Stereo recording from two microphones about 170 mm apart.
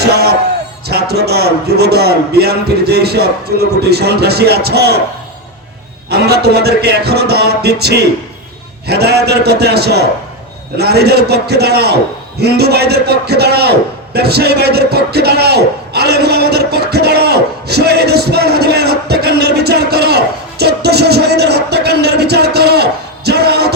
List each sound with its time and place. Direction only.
0.0 s music: 70° right (ahead or behind)
0.9 s a man's voice: 70° right (ahead or behind)
6.1 s a man's voice: 70° right (ahead or behind)
12.4 s a sound: 70° right (ahead or behind)